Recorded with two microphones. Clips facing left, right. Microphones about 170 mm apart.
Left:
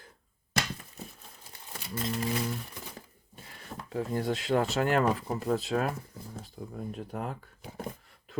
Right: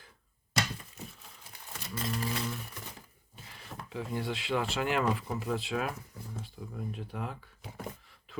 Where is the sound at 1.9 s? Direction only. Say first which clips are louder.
Left 3 dB; 30° left (ahead or behind).